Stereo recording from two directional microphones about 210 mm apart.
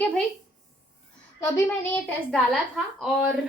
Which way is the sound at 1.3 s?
15° left (ahead or behind).